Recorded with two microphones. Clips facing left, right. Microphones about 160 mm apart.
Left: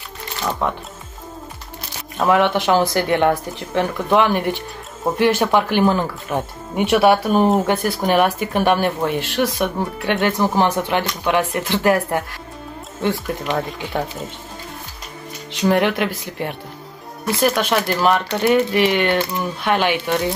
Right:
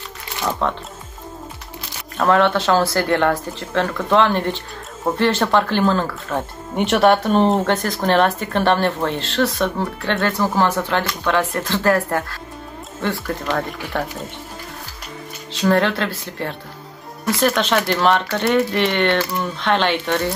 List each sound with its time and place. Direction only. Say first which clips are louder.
0.6 s speech: even; 10° left (ahead or behind)
2.1 s speech: even; 15° left (ahead or behind)
15.5 s speech: even; 15° left (ahead or behind)